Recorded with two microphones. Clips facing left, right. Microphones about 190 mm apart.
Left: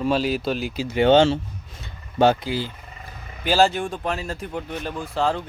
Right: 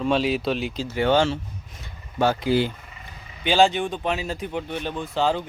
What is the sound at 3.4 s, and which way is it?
Speech, 5° left (ahead or behind).